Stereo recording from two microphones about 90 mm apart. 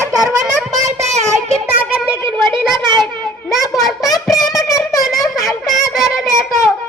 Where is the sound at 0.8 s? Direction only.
35° right (ahead or behind).